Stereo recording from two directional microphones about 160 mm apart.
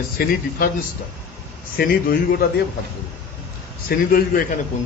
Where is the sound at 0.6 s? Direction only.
65° left (ahead or behind).